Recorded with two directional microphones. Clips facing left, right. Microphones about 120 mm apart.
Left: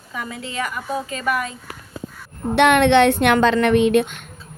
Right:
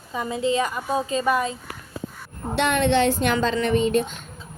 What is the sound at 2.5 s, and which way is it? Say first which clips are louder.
A woman's voice: left 6 dB; 65° left (ahead or behind).